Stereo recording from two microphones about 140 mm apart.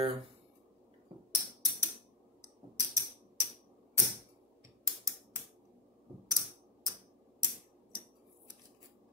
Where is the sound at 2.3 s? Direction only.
25° right (ahead or behind).